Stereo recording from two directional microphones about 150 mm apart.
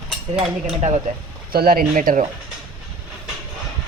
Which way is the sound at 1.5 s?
80° right.